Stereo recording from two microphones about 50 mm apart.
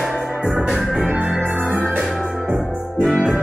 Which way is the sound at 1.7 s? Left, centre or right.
Right.